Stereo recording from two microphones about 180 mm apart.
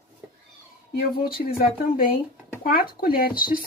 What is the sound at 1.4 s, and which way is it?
Speech, 55° left (ahead or behind).